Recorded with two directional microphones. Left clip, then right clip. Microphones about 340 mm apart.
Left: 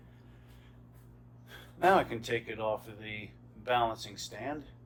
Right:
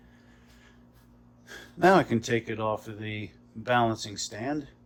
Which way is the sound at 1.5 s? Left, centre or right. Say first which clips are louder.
Right 5 dB; right.